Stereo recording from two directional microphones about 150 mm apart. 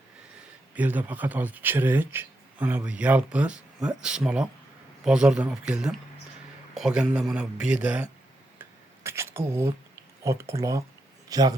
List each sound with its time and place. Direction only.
0.8 s speech: 10° right (ahead or behind)
9.0 s a sound: 15° right (ahead or behind)
10.2 s speech: 20° right (ahead or behind)